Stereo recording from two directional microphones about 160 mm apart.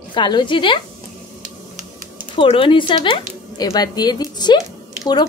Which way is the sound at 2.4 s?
35° left (ahead or behind).